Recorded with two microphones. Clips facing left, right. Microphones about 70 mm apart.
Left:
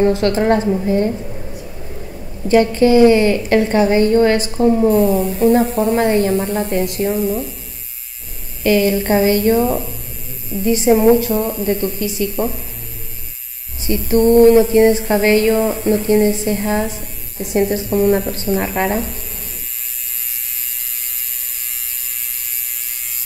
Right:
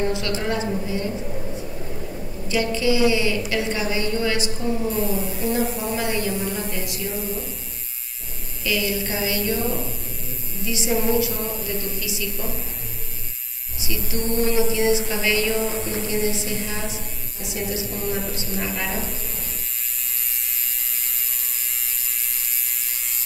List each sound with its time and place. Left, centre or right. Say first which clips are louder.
0.0 s a woman's voice: left 10 dB; left
2.4 s a woman's voice: left 10 dB; left
4.9 s speech: left 10 dB; centre
5.9 s a woman's voice: left 10 dB; left
7.2 s speech: left 10 dB; centre
8.6 s a woman's voice: left 11 dB; left
13.7 s a woman's voice: left 13 dB; left